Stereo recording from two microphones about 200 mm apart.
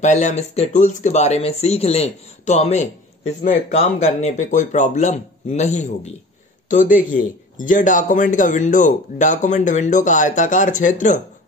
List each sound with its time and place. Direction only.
0.0 s a man's voice: 35° left (ahead or behind)